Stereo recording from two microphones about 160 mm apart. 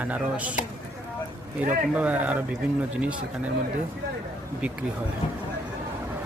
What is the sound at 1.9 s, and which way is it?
Speech, 10° right (ahead or behind).